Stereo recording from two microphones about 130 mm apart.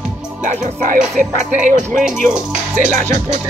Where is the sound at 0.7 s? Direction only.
75° right (ahead or behind).